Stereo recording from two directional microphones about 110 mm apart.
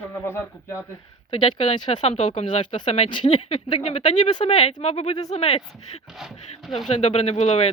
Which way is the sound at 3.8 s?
90° left.